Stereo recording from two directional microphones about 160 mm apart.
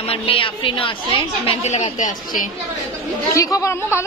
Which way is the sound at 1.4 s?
45° left (ahead or behind).